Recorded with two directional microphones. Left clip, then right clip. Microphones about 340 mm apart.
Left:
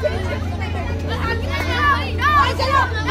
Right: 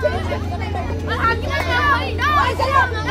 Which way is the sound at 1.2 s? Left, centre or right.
Right.